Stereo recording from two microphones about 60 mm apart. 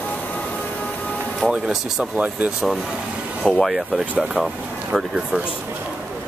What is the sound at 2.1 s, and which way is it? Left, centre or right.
Speech, right.